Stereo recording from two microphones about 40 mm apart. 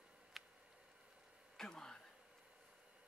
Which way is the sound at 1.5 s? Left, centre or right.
Centre.